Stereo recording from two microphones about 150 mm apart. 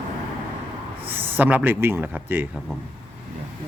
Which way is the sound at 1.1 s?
10° right (ahead or behind).